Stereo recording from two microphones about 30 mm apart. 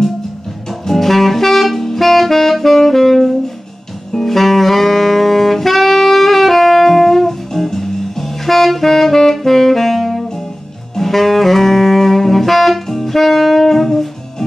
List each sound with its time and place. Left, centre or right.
0.7 s saxophone: centre